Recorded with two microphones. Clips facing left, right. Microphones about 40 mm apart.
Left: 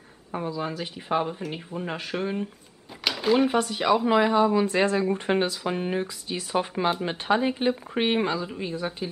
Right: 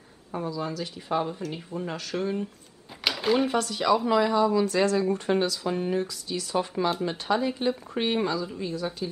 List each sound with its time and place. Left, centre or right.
0.3 s speech: left
3.0 s a sound: centre
3.4 s speech: left